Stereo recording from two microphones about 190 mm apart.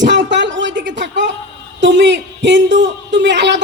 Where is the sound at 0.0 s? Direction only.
70° right (ahead or behind).